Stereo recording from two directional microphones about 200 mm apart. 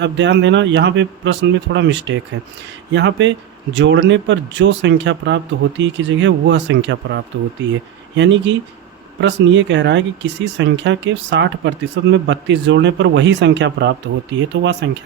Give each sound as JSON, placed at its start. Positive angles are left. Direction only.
{"t": 0.0, "sound": "speech", "side_deg": -60}